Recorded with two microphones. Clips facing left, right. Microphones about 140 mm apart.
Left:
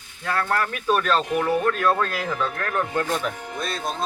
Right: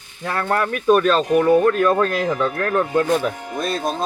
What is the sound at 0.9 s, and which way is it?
Speech, 45° right (ahead or behind).